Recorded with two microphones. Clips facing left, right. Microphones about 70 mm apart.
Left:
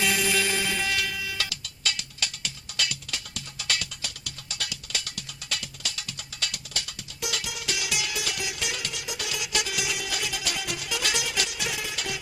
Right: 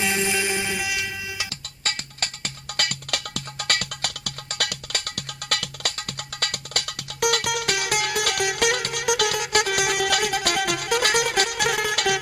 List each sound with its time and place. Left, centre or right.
0.0 s music: right
1.5 s music: right